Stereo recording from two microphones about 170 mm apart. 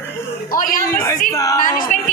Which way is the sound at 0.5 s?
50° left (ahead or behind).